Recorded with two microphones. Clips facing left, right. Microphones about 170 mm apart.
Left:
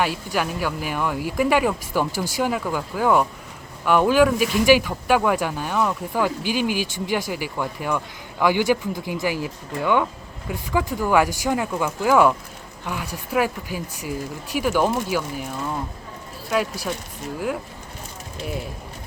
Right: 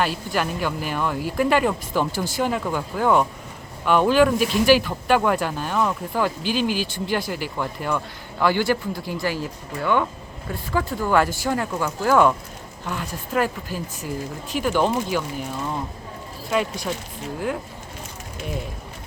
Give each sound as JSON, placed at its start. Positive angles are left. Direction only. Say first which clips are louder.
{"t": 0.0, "sound": "speech", "louder": "even", "side_deg": 10}